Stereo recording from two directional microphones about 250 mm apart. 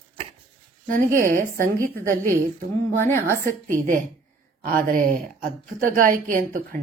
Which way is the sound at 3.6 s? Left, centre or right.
Right.